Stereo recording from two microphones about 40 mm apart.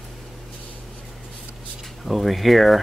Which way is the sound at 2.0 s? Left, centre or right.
Centre.